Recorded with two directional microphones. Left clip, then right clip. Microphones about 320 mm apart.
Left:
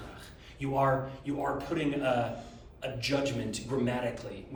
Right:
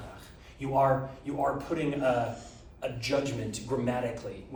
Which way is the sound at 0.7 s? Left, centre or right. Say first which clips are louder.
Right 3 dB; centre.